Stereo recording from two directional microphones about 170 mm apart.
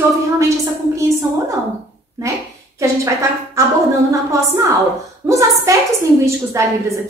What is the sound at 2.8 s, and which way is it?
Speech, 20° right (ahead or behind).